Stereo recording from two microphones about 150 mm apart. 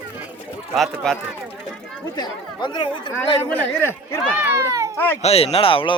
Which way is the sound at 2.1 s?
30° left (ahead or behind).